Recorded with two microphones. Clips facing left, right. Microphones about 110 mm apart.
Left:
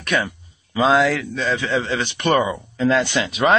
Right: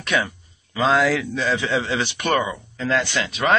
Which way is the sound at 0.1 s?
5° right (ahead or behind).